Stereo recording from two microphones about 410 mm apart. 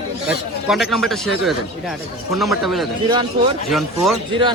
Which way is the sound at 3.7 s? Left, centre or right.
Centre.